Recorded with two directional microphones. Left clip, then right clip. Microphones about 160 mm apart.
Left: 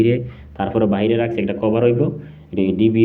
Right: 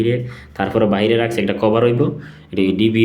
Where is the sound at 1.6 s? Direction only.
45° right (ahead or behind).